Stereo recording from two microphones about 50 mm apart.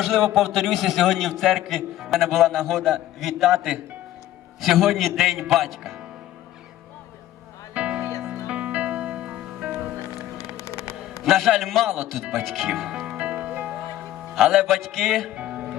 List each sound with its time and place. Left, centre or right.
0.0 s a man's voice: centre
7.7 s music: right
10.3 s a sound: left
11.2 s a man's voice: centre
13.1 s music: right
14.3 s a man's voice: centre
15.4 s music: right